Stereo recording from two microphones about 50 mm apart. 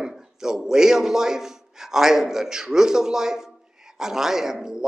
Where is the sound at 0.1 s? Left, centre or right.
Centre.